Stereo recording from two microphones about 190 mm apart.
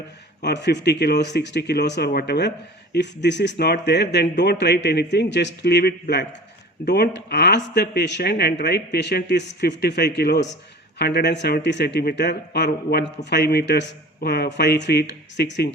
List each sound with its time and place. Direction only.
0.4 s speech: 65° left (ahead or behind)